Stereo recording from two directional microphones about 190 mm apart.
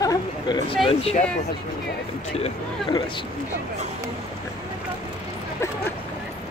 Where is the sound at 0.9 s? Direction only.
30° left (ahead or behind).